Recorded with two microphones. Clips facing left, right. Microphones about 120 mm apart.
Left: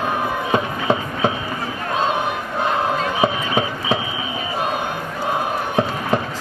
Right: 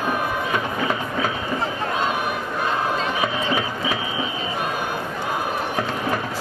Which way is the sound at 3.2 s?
25° left (ahead or behind).